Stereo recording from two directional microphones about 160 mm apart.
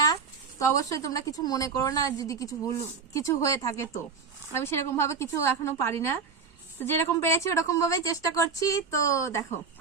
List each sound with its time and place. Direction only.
0.6 s a woman's voice: 20° left (ahead or behind)